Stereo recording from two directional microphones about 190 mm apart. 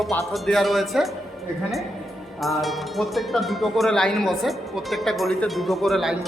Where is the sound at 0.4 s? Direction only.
Centre (ahead or behind).